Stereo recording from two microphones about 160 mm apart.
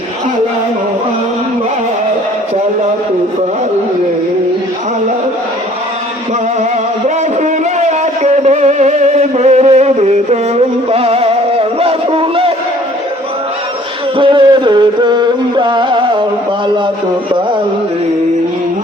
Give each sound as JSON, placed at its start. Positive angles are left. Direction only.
{"t": 7.4, "sound": "music", "side_deg": -45}
{"t": 14.2, "sound": "music", "side_deg": -30}